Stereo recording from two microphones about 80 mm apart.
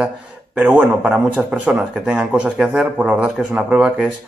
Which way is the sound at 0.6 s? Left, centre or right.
Centre.